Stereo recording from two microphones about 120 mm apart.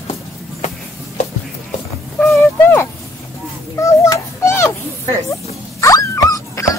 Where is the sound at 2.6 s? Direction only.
15° left (ahead or behind).